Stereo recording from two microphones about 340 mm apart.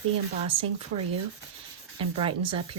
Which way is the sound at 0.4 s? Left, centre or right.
Centre.